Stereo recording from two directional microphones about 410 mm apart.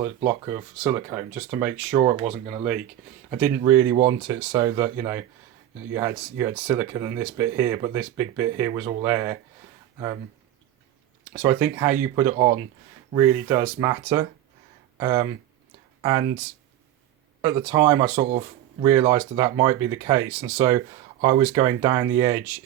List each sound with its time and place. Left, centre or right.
0.0 s speech: centre
1.9 s speech: centre
3.2 s speech: centre
11.3 s speech: centre
17.4 s speech: centre